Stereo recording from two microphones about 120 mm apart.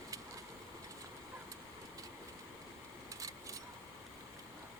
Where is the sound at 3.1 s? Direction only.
30° right (ahead or behind).